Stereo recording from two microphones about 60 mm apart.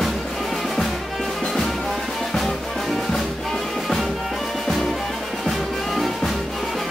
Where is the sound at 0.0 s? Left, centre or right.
Centre.